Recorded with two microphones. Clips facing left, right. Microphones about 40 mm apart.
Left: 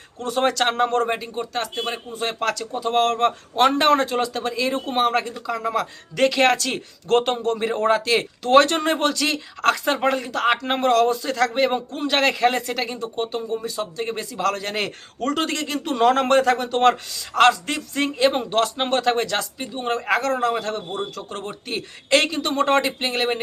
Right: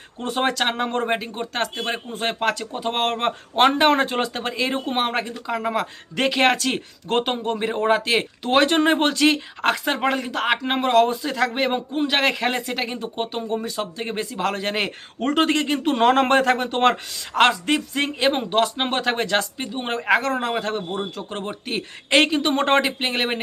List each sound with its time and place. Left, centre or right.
0.2 s speech: right
0.5 s a man's voice: centre
1.2 s speech: right
2.4 s speech: right
4.0 s speech: right
9.6 s a man's voice: centre
10.9 s a man's voice: right
12.8 s speech: right
13.7 s speech: right
14.0 s speech: right
19.2 s speech: right